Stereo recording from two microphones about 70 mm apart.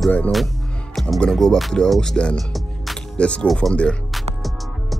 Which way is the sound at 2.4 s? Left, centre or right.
Centre.